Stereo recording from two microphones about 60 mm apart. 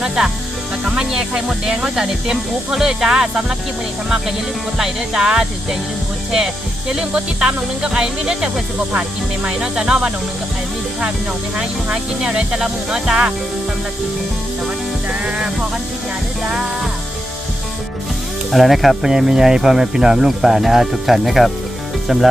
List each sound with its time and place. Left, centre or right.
0.9 s speech: centre
4.8 s speech: centre
11.5 s speech: centre
15.2 s speech: centre
18.5 s speech: centre